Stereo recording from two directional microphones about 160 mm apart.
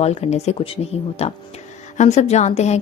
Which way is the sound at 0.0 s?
40° left (ahead or behind).